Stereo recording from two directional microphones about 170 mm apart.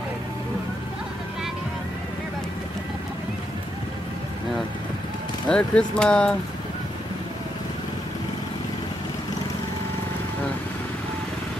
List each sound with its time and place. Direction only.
5.5 s speech: 5° left (ahead or behind)